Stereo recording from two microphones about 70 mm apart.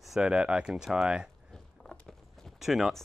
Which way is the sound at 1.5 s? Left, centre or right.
Centre.